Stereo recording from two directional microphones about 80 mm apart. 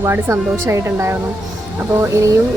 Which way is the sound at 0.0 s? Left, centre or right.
Right.